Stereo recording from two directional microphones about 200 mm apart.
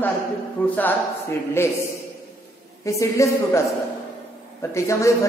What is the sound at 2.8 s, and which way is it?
Speech, 15° left (ahead or behind).